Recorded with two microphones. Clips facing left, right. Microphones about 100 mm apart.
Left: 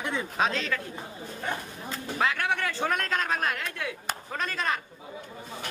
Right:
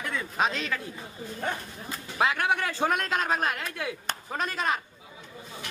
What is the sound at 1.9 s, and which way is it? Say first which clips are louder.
A man's voice: right 1 dB; 15° right (ahead or behind).